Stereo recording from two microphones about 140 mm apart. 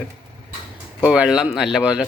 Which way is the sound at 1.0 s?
5° right (ahead or behind).